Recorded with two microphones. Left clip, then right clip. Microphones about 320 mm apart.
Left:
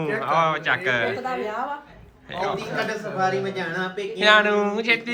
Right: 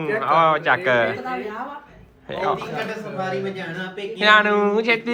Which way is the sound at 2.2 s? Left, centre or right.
Centre.